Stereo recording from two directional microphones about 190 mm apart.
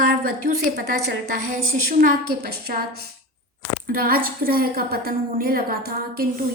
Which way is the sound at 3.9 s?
50° right (ahead or behind).